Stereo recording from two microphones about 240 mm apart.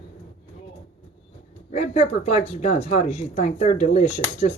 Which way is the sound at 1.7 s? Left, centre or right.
Left.